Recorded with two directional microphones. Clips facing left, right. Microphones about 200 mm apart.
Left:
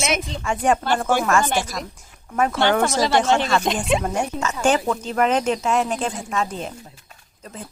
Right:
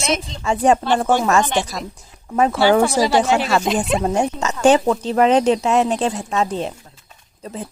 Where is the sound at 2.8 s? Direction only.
15° right (ahead or behind).